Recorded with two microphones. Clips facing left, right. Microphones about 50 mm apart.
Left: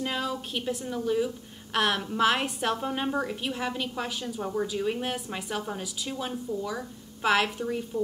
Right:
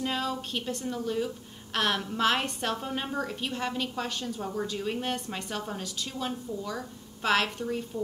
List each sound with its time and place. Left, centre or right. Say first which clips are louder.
0.0 s a woman's voice: even; centre